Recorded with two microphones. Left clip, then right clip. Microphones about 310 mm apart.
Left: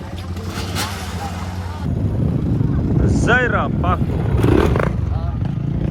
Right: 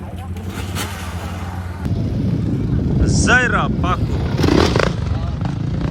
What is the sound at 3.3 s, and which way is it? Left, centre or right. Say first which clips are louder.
Speech: right 2 dB; centre.